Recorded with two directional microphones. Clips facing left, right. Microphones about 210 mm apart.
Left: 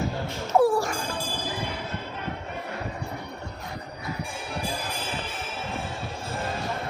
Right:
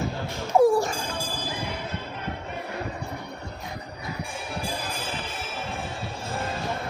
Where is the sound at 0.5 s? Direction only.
20° right (ahead or behind).